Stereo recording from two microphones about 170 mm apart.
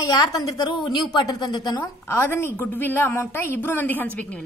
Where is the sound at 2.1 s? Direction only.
15° left (ahead or behind).